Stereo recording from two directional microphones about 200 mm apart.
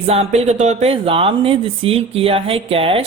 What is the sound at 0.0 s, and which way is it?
Speech, 30° right (ahead or behind).